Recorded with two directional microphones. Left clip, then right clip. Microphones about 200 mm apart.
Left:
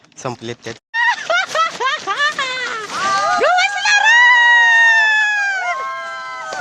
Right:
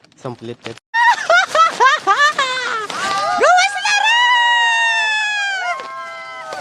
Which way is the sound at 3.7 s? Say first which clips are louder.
Left 3 dB; 5° right (ahead or behind).